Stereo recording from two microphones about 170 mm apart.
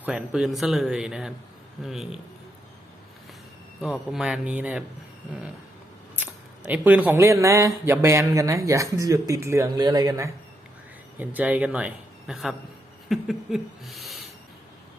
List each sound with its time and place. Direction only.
0.0 s speech: 5° right (ahead or behind)
3.8 s speech: centre (ahead or behind)
6.1 s speech: 10° right (ahead or behind)
11.2 s speech: 10° right (ahead or behind)